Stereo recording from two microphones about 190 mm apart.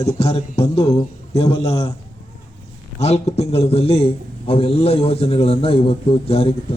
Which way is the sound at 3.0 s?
35° left (ahead or behind).